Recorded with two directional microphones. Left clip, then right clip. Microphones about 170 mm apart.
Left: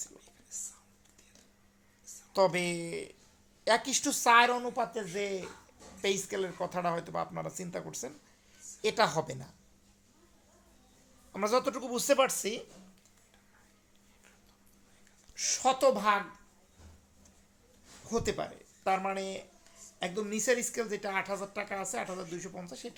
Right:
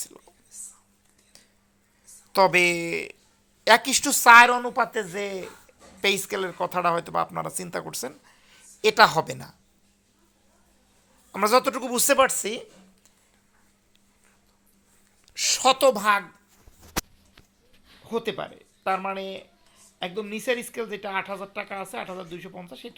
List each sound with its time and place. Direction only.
0.1 s whispering: 30° right (ahead or behind)
0.5 s whispering: 10° left (ahead or behind)
2.3 s speech: 30° right (ahead or behind)
11.3 s speech: 25° right (ahead or behind)
15.4 s a woman's voice: 50° right (ahead or behind)
18.0 s speech: 20° right (ahead or behind)